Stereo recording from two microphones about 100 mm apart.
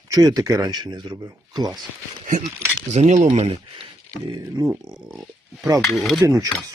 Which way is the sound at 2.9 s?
80° right.